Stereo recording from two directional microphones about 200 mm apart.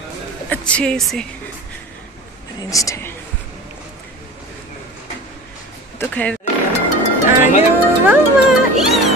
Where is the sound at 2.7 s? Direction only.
15° left (ahead or behind).